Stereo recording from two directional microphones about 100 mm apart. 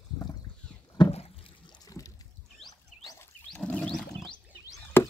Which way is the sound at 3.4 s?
10° left (ahead or behind).